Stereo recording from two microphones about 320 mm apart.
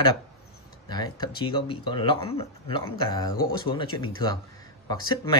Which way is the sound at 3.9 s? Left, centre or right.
Left.